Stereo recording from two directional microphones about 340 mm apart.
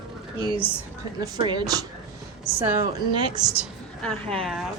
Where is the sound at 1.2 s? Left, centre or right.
Centre.